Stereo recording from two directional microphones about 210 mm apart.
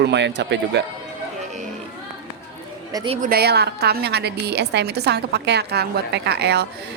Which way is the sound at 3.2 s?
50° right (ahead or behind).